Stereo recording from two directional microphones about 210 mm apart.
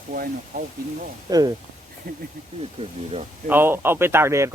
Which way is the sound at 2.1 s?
45° right (ahead or behind).